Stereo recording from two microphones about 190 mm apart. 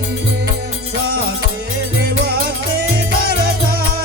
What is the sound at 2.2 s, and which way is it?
Music, 55° right (ahead or behind).